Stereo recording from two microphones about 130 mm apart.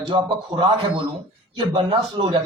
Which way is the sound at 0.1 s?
40° right (ahead or behind).